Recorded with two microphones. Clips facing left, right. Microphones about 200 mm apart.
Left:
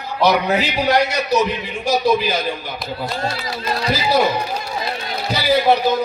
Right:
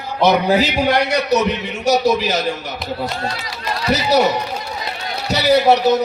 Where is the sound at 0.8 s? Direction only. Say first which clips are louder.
Right 1 dB; 65° right (ahead or behind).